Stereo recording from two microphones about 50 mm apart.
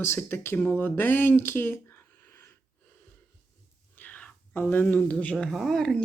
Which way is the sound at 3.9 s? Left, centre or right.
Left.